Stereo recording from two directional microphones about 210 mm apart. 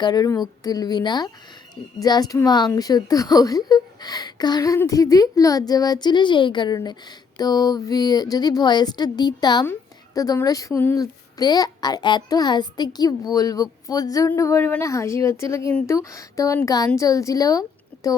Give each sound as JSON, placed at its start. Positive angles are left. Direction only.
{"t": 0.0, "sound": "speech", "side_deg": 20}